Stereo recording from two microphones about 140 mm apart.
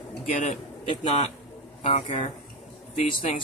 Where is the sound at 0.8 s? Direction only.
50° left (ahead or behind).